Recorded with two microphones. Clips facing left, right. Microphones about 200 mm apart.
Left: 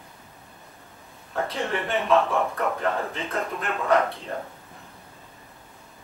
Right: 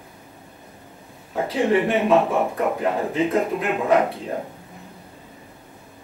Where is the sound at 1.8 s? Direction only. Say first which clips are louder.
Right 4 dB; 15° right (ahead or behind).